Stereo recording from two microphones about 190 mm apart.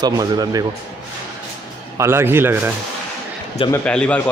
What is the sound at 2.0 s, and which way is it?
Speech, 15° right (ahead or behind).